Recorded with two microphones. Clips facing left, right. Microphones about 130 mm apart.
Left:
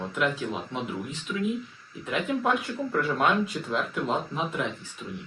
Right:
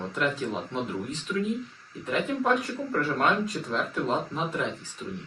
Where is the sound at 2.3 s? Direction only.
10° left (ahead or behind).